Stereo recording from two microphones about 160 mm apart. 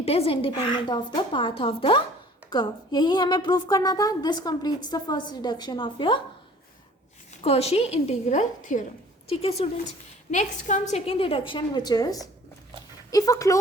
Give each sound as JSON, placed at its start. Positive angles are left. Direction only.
{"t": 0.0, "sound": "a woman's voice", "side_deg": 40}
{"t": 7.4, "sound": "a woman's voice", "side_deg": 40}
{"t": 9.3, "sound": "a woman's voice", "side_deg": 40}